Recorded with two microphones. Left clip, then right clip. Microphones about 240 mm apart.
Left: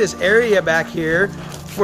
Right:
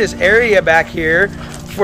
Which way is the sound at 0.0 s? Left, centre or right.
Centre.